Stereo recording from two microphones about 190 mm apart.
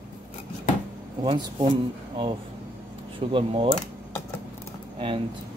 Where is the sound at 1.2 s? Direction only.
25° right (ahead or behind).